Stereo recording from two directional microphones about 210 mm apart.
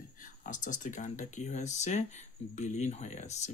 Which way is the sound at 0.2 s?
40° left (ahead or behind).